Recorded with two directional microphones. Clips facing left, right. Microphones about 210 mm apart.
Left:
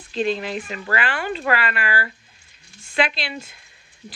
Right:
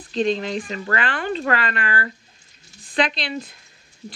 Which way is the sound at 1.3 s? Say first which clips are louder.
Even; 35° right (ahead or behind).